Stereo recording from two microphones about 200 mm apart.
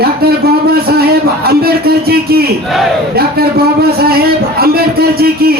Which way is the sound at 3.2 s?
50° right (ahead or behind).